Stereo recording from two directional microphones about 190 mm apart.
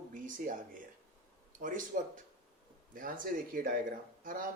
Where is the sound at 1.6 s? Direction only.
45° right (ahead or behind).